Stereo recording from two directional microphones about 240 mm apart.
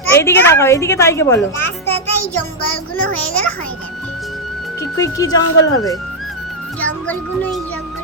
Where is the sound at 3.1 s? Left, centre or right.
Centre.